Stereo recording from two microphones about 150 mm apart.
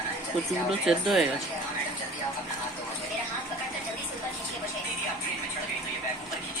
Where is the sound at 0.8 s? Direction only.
Centre (ahead or behind).